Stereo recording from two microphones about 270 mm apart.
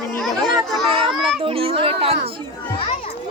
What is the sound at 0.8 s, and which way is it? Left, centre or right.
A child's voice, centre.